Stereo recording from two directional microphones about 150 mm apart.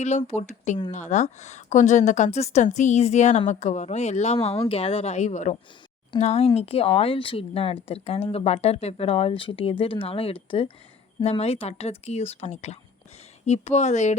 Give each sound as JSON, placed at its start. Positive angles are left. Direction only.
{"t": 0.0, "sound": "a woman's voice", "side_deg": 50}